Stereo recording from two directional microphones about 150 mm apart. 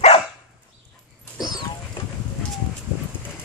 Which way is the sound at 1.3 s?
25° left (ahead or behind).